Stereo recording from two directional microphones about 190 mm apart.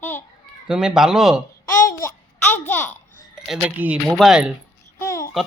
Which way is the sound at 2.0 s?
10° left (ahead or behind).